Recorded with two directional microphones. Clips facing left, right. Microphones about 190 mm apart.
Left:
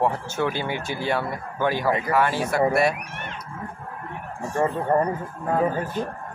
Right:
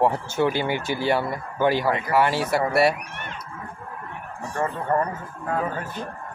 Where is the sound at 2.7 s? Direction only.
5° right (ahead or behind).